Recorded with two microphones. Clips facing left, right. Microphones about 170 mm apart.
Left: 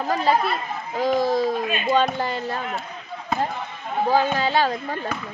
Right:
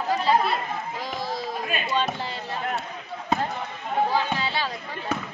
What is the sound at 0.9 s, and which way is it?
Speech, 45° left (ahead or behind).